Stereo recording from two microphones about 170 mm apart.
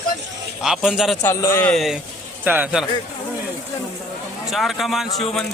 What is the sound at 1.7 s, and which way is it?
Speech, centre (ahead or behind).